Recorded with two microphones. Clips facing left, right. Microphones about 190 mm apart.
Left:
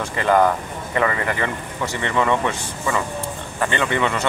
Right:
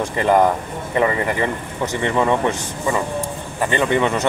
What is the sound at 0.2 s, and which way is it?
Speech, 15° right (ahead or behind).